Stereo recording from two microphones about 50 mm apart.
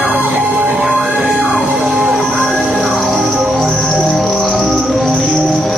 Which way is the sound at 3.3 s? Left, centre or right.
Centre.